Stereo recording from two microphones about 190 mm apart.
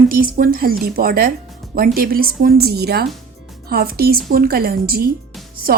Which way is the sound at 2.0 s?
50° right (ahead or behind).